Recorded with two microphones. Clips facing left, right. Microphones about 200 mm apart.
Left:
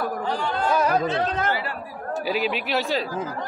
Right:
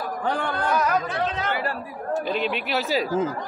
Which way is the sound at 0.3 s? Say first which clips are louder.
Right 3 dB; 55° right (ahead or behind).